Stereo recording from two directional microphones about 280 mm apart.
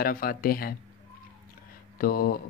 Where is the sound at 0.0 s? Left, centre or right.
Left.